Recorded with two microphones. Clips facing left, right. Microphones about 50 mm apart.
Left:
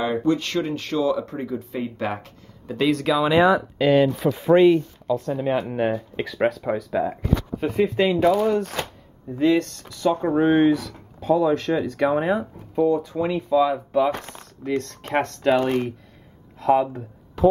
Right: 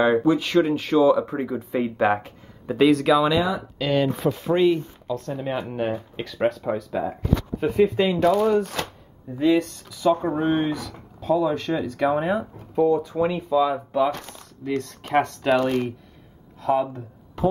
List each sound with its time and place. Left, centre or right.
0.2 s speech: centre
2.8 s speech: centre
3.3 s speech: left
3.7 s speech: centre
4.5 s speech: left
5.0 s speech: centre
10.3 s speech: centre
10.7 s speech: centre
12.9 s speech: centre
13.5 s speech: centre
14.8 s speech: centre
15.5 s speech: centre
16.6 s speech: centre